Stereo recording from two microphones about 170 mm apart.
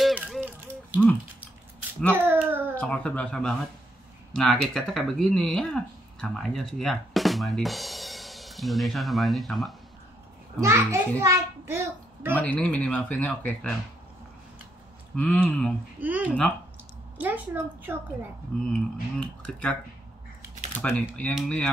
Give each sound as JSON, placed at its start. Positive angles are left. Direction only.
{"t": 0.0, "sound": "music", "side_deg": -5}
{"t": 2.1, "sound": "a sound", "side_deg": -10}
{"t": 2.7, "sound": "speech", "side_deg": 10}
{"t": 10.6, "sound": "a child's voice", "side_deg": -15}
{"t": 12.4, "sound": "speech", "side_deg": 10}
{"t": 15.1, "sound": "speech", "side_deg": 10}
{"t": 16.0, "sound": "a child's voice", "side_deg": -10}
{"t": 17.9, "sound": "a child's voice", "side_deg": -10}
{"t": 18.7, "sound": "speech", "side_deg": 5}
{"t": 20.8, "sound": "speech", "side_deg": 10}